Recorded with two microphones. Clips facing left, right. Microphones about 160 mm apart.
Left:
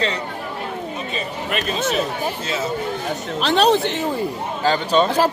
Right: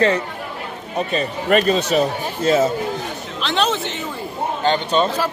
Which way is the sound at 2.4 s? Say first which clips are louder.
Right 9 dB; 50° right (ahead or behind).